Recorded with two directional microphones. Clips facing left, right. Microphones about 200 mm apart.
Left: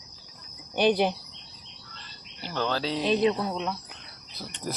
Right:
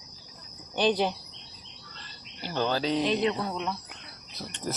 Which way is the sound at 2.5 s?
15° right (ahead or behind).